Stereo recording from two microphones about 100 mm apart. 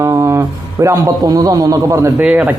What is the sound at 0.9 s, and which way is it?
Music, 40° right (ahead or behind).